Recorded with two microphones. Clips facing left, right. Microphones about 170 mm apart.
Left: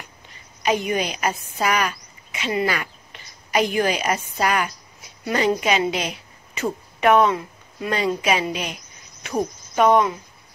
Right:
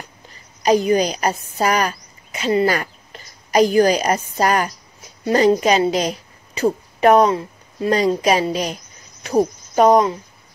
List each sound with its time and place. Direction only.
0.3 s a woman's voice: 35° right (ahead or behind)